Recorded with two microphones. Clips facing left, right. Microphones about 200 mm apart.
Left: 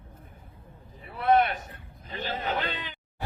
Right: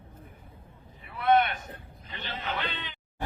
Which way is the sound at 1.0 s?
35° left (ahead or behind).